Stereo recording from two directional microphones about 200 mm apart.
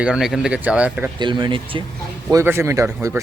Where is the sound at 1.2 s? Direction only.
25° right (ahead or behind).